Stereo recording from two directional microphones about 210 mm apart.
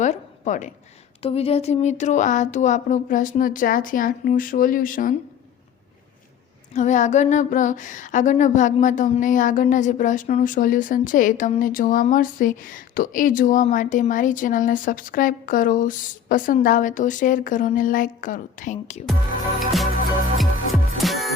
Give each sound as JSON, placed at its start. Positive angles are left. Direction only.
{"t": 0.0, "sound": "a sound", "side_deg": 35}
{"t": 1.2, "sound": "speech", "side_deg": 30}
{"t": 6.7, "sound": "speech", "side_deg": 35}
{"t": 19.5, "sound": "music", "side_deg": 0}